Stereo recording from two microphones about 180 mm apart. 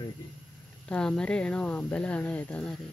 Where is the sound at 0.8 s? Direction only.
5° left (ahead or behind).